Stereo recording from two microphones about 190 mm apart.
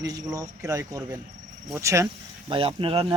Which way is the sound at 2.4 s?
30° right (ahead or behind).